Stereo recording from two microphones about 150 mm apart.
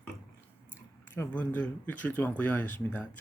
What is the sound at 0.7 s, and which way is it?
Speech, 15° left (ahead or behind).